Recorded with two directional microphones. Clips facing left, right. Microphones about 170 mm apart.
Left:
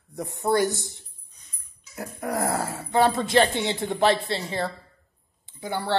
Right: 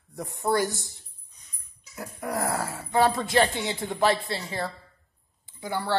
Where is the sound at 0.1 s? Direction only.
25° left (ahead or behind).